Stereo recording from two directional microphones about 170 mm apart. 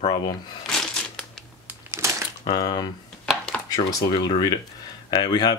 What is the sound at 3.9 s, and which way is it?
Speech, 25° left (ahead or behind).